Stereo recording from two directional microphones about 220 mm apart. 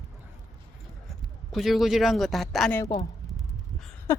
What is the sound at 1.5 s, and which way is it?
Speech, centre (ahead or behind).